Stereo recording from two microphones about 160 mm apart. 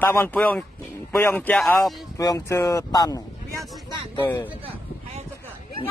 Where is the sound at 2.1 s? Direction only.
20° left (ahead or behind).